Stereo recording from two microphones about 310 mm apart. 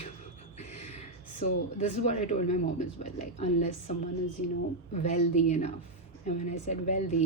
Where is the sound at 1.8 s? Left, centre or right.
Left.